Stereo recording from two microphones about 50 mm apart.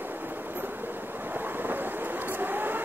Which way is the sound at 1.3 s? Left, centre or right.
Right.